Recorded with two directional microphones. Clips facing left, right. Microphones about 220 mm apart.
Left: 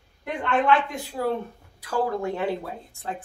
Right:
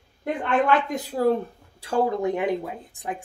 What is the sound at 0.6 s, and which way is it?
Speech, 40° right (ahead or behind).